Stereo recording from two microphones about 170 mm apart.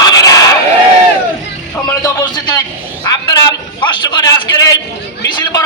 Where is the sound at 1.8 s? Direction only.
20° left (ahead or behind).